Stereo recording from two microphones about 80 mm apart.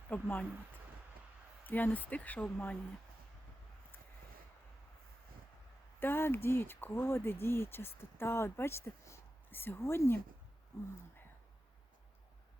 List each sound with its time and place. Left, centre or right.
0.1 s speech: left
1.6 s speech: left
6.0 s speech: left
10.7 s a sound: left